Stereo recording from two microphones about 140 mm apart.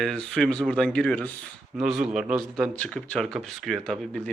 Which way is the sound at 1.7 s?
5° right (ahead or behind).